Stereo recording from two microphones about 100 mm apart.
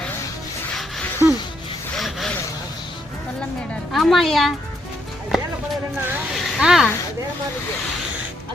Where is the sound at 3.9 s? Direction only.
Centre (ahead or behind).